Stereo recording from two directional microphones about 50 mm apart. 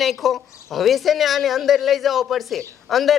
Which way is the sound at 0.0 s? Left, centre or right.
Centre.